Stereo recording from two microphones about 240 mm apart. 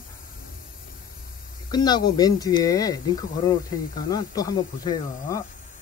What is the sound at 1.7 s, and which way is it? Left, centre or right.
Speech, centre.